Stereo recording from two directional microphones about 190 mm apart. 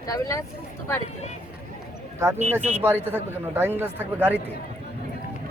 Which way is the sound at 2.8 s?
10° right (ahead or behind).